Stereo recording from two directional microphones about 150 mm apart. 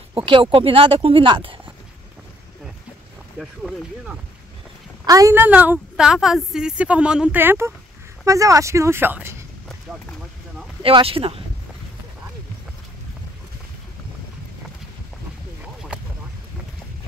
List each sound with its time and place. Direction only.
0.1 s speech: 35° right (ahead or behind)
3.3 s speech: centre (ahead or behind)
5.0 s a woman's voice: 20° right (ahead or behind)
10.8 s speech: 35° right (ahead or behind)